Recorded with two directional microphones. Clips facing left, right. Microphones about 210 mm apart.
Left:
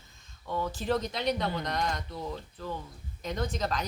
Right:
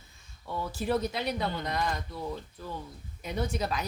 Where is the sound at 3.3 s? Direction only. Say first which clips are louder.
Even; 10° right (ahead or behind).